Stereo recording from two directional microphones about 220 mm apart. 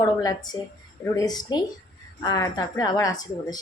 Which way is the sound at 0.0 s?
15° left (ahead or behind).